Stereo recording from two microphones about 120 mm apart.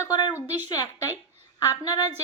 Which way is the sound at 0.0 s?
35° left (ahead or behind).